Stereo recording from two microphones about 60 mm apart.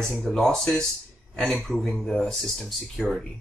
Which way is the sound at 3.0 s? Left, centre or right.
Centre.